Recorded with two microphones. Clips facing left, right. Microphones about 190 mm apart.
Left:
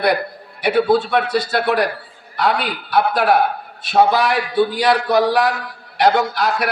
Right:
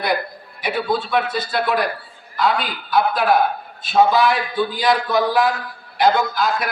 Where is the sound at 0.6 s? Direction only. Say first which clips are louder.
Left 7 dB; 70° left (ahead or behind).